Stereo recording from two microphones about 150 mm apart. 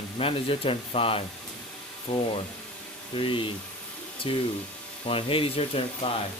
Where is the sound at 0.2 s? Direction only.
40° left (ahead or behind).